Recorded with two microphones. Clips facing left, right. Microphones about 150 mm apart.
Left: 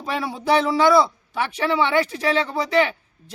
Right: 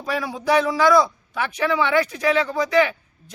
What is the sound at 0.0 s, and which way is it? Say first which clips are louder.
Speech: right 1 dB; 25° left (ahead or behind).